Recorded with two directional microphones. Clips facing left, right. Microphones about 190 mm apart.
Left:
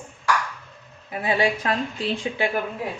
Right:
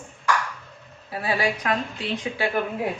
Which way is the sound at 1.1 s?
20° left (ahead or behind).